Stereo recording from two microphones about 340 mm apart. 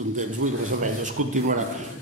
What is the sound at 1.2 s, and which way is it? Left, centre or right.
Speech, right.